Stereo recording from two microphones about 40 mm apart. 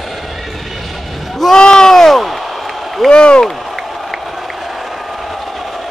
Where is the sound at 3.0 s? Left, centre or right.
Left.